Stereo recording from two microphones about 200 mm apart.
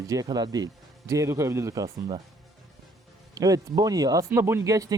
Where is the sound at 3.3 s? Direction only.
20° right (ahead or behind).